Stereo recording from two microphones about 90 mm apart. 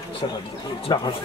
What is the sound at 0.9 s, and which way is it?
Speech, 50° left (ahead or behind).